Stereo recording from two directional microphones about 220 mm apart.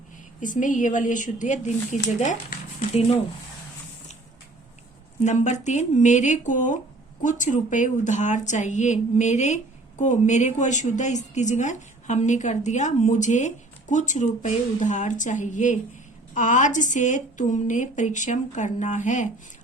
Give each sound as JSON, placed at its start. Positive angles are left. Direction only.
{"t": 0.3, "sound": "a woman's voice", "side_deg": 35}
{"t": 5.2, "sound": "a woman's voice", "side_deg": 30}